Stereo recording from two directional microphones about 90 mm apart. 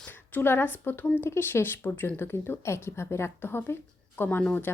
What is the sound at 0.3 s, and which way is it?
A woman's voice, 20° left (ahead or behind).